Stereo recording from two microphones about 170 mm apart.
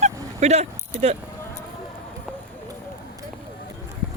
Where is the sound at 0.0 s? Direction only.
40° right (ahead or behind).